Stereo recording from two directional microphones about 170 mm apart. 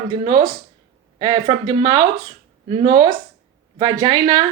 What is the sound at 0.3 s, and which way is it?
Speech, 30° right (ahead or behind).